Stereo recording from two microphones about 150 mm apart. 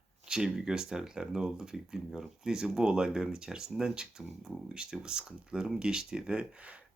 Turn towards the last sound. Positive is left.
turn(degrees=-10)  # may be behind; listen again after turning